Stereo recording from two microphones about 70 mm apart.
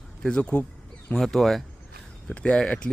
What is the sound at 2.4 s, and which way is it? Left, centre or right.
Speech, centre.